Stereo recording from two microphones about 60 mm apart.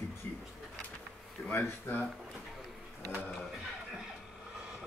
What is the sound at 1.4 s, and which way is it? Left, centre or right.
Speech, left.